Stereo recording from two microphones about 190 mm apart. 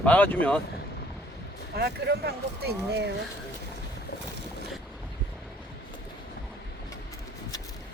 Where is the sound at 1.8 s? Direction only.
55° right (ahead or behind).